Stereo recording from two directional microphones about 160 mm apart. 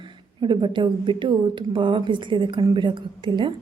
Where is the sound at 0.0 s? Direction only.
30° right (ahead or behind).